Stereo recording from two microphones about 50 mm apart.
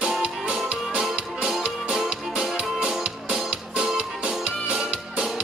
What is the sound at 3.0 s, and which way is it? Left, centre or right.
Music, centre.